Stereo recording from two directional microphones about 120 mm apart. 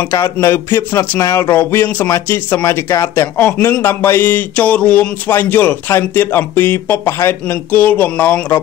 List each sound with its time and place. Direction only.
0.0 s speech: 25° left (ahead or behind)